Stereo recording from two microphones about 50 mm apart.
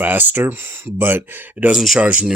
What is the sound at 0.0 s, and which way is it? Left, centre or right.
Speech, right.